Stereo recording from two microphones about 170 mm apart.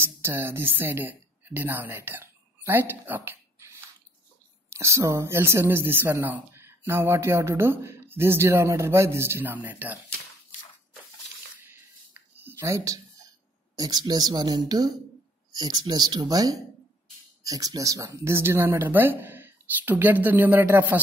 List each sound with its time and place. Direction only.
0.0 s speech: 15° right (ahead or behind)
11.6 s a sound: 10° right (ahead or behind)
13.7 s speech: 25° right (ahead or behind)